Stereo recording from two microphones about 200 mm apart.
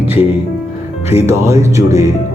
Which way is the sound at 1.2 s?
15° right (ahead or behind).